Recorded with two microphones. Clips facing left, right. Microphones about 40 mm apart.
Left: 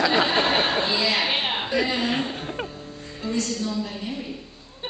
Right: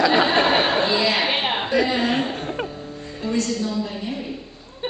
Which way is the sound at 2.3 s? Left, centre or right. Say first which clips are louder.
Right 4 dB; centre.